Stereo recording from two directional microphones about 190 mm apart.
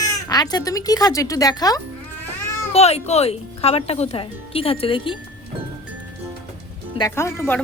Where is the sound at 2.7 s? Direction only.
35° left (ahead or behind).